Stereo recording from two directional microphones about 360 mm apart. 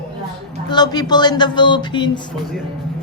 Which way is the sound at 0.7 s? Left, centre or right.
Centre.